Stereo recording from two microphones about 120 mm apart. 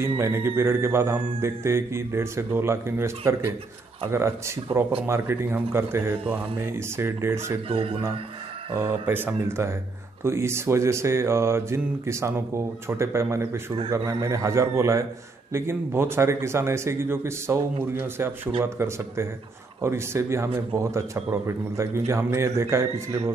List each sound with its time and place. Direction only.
0.0 s a man's voice: 20° right (ahead or behind)
5.0 s a man's voice: 20° right (ahead or behind)
7.6 s speech: 50° right (ahead or behind)
8.7 s a man's voice: 20° right (ahead or behind)